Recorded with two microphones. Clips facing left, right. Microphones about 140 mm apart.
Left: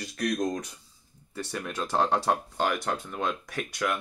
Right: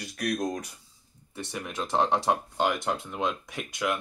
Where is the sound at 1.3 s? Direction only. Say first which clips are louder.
Left 1 dB; 20° right (ahead or behind).